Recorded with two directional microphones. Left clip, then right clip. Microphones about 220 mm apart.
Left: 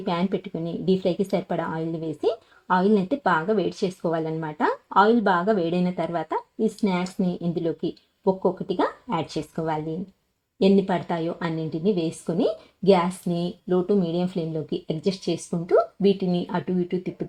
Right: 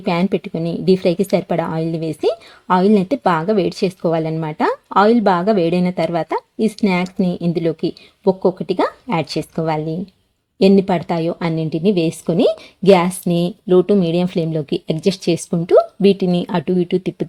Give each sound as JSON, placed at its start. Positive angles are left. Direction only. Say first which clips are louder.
{"t": 0.0, "sound": "speech", "louder": "right 7 dB", "side_deg": -25}